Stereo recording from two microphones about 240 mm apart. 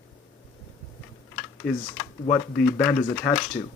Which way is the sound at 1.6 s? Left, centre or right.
Centre.